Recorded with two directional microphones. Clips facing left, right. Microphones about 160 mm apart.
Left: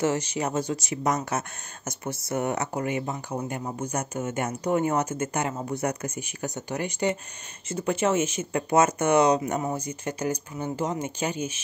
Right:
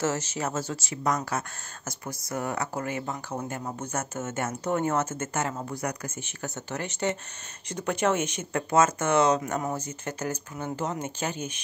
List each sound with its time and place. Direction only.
0.0 s speech: 15° left (ahead or behind)
8.6 s speech: 20° left (ahead or behind)